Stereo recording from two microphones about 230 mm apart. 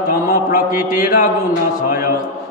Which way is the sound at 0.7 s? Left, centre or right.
Centre.